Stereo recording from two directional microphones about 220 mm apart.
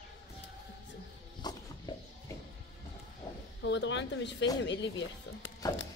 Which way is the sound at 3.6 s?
55° left (ahead or behind).